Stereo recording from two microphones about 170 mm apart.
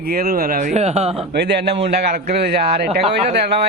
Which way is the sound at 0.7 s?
40° right (ahead or behind).